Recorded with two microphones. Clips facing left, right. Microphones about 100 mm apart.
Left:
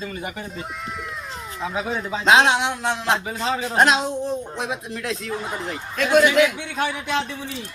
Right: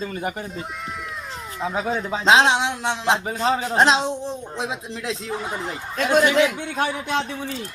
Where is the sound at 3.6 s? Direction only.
25° right (ahead or behind).